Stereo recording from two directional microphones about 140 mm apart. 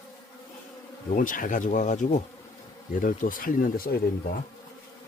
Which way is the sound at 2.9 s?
70° left (ahead or behind).